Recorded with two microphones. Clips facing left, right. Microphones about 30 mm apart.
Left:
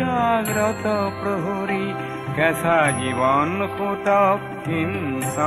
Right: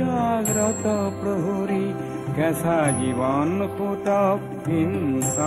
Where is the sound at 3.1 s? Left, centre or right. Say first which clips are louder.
Left 4 dB; left.